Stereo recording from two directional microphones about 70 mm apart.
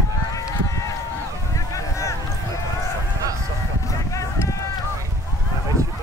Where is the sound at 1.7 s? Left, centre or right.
Left.